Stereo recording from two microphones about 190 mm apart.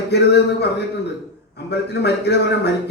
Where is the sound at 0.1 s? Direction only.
60° left (ahead or behind).